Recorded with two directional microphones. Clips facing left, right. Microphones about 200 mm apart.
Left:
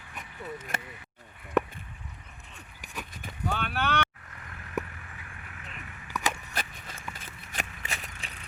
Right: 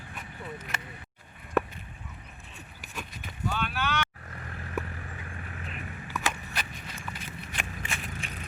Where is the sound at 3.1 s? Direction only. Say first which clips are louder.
Left 1 dB; 55° left (ahead or behind).